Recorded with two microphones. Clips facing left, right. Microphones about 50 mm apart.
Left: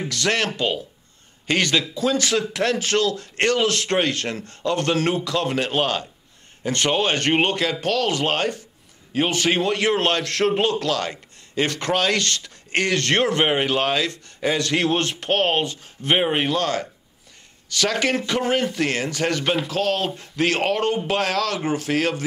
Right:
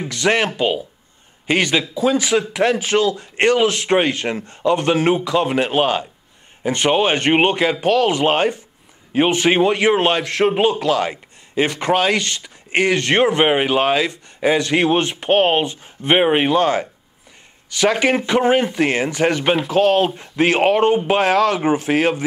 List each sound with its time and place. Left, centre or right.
0.1 s a man's voice: centre